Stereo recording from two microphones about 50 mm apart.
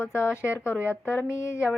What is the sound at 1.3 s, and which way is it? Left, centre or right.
Speech, left.